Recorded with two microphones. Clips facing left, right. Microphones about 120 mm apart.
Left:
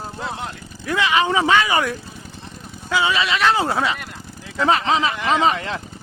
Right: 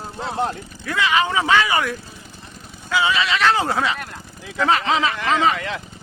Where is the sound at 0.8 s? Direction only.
25° left (ahead or behind).